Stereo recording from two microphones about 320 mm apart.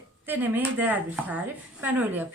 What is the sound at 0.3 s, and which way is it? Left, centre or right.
A woman's voice, centre.